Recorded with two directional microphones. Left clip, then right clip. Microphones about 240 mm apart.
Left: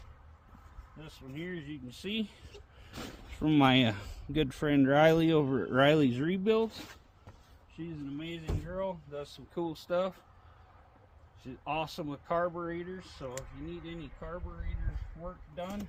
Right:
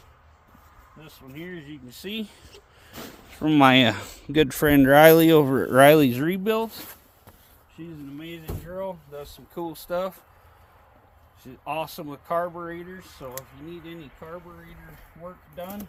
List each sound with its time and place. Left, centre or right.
0.9 s speech: centre; by 7.0 s right
8.2 s speech: centre
11.4 s speech: centre